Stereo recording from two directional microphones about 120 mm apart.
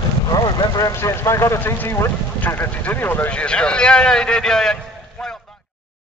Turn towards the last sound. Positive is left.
turn(degrees=5)  # may be behind; listen again after turning